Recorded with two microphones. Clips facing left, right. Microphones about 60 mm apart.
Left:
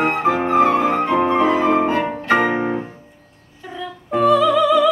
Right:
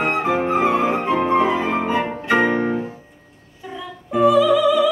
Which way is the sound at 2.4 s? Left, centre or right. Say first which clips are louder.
Even; centre.